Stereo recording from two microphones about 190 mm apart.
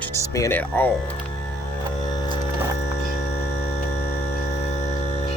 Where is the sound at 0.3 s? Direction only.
10° left (ahead or behind).